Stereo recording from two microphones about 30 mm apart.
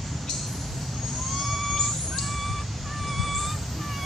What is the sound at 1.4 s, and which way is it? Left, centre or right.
Vehicle, centre.